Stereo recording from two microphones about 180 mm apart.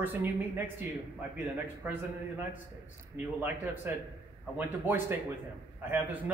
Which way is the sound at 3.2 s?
10° right (ahead or behind).